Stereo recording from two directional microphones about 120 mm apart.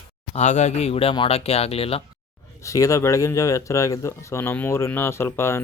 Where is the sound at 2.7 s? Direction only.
25° left (ahead or behind).